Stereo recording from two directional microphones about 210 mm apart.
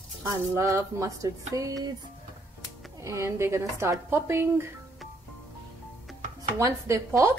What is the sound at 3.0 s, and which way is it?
Speech, 15° right (ahead or behind).